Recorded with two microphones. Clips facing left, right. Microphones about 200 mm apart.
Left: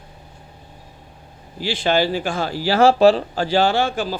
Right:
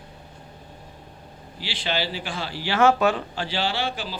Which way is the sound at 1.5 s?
45° left (ahead or behind).